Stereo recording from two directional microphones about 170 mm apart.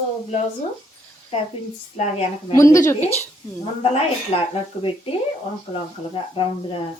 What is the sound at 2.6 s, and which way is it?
Speech, 15° left (ahead or behind).